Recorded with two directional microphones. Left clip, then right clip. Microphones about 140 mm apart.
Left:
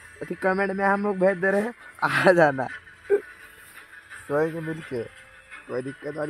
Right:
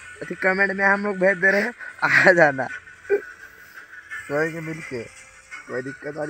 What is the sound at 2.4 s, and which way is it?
Speech, 30° left (ahead or behind).